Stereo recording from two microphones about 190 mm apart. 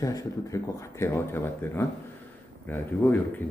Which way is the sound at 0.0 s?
20° left (ahead or behind).